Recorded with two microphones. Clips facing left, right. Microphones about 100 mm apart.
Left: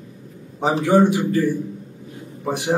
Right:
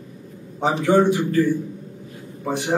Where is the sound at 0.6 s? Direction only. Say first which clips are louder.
Left 1 dB; 15° left (ahead or behind).